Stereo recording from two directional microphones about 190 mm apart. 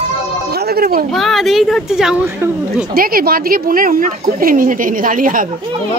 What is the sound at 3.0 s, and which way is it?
Speech, 50° right (ahead or behind).